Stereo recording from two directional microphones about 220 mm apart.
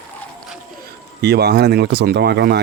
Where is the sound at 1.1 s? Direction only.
50° right (ahead or behind).